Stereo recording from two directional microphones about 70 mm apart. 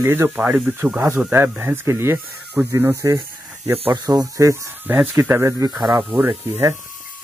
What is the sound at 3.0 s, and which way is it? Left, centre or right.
Speech, right.